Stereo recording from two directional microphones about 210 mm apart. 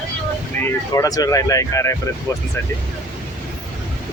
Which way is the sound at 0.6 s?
15° left (ahead or behind).